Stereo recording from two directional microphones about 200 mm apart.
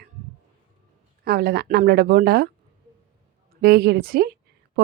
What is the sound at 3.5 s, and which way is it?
Speech, 50° right (ahead or behind).